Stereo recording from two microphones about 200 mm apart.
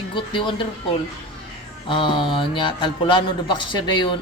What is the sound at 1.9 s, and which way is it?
A man's voice, 25° left (ahead or behind).